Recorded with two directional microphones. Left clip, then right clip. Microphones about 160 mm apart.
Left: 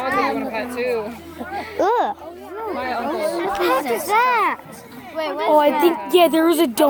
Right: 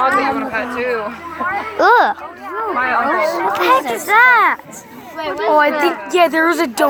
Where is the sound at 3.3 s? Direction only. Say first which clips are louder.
Right 6 dB; centre (ahead or behind).